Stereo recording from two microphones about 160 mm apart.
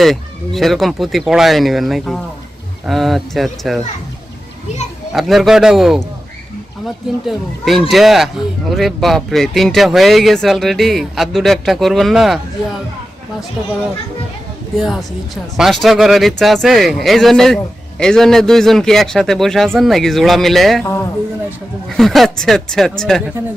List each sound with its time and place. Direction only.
0.0 s speech: centre (ahead or behind)
5.1 s speech: centre (ahead or behind)
14.8 s speech: centre (ahead or behind)
20.8 s a man's voice: 15° left (ahead or behind)
21.8 s speech: centre (ahead or behind)